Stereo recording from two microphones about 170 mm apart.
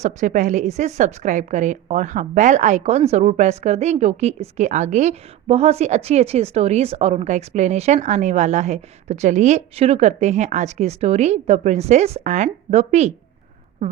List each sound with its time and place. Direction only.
0.0 s a woman's voice: 45° right (ahead or behind)